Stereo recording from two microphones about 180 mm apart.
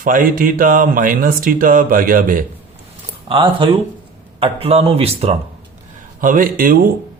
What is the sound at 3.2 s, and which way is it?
Speech, 30° right (ahead or behind).